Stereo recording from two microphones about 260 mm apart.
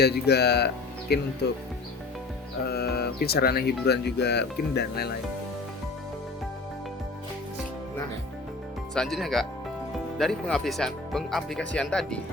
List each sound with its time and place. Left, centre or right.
0.0 s speech: left
2.6 s speech: left
9.0 s speech: centre